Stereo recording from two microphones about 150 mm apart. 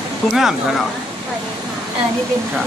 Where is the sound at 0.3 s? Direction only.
5° right (ahead or behind).